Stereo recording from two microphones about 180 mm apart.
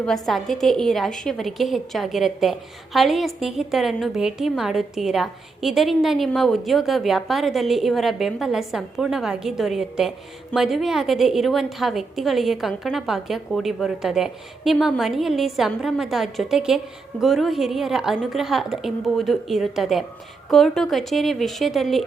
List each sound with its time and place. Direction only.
0.0 s a woman's voice: centre (ahead or behind)